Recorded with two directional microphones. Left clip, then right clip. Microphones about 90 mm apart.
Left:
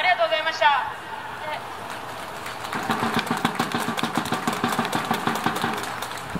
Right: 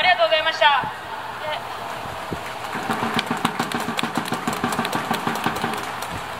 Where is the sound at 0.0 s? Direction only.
25° right (ahead or behind).